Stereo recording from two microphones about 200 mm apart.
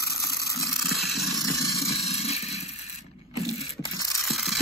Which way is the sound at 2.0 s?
30° left (ahead or behind).